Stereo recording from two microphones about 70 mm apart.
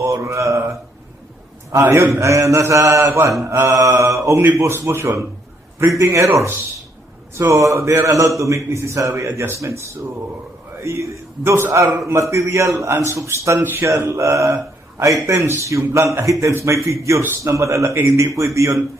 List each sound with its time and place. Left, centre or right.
0.0 s a man's voice: right
1.8 s a man's voice: right
3.4 s speech: right
3.7 s a man's voice: right
3.9 s a man's voice: right
10.8 s a man's voice: right
17.9 s speech: right
18.3 s a man's voice: right